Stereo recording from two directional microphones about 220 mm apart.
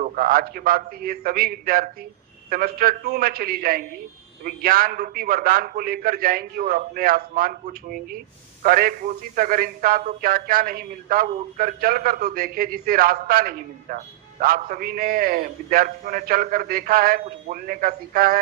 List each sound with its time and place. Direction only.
0.0 s a man's voice: 40° right (ahead or behind)